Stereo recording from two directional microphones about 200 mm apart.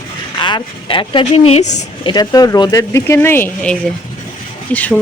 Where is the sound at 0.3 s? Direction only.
25° left (ahead or behind).